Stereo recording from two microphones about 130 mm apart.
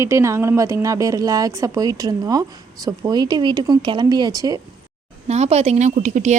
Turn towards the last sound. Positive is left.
turn(degrees=-65)  # may be behind; listen again after turning